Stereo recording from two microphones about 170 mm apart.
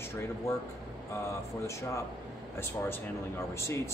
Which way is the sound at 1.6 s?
15° left (ahead or behind).